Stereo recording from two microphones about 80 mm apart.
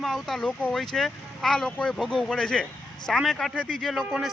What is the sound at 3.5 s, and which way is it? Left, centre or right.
Speech, centre.